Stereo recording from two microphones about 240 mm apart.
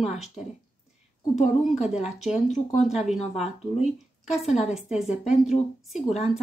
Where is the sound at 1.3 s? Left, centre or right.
Left.